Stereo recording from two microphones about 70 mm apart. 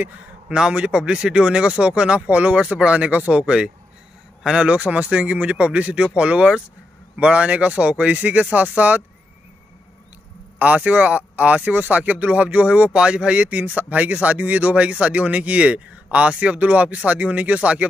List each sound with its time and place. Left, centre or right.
0.5 s speech: centre
10.6 s speech: centre